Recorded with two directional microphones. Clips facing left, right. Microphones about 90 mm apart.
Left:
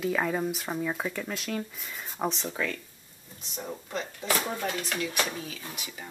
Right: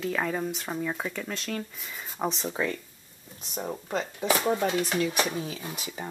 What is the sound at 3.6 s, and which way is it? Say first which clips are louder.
Speech: right 4 dB; 30° right (ahead or behind).